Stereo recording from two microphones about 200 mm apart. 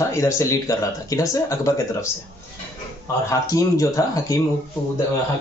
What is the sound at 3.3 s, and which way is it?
Speech, 15° left (ahead or behind).